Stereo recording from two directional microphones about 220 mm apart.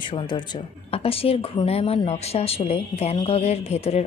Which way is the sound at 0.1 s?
20° left (ahead or behind).